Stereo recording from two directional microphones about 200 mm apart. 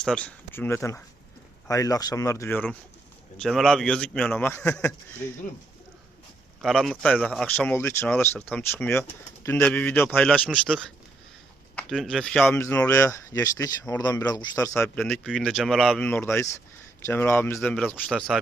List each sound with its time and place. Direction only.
0.0 s speech: 5° left (ahead or behind)
6.6 s speech: centre (ahead or behind)